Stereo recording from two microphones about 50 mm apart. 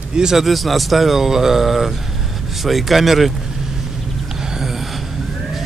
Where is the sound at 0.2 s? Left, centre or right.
Centre.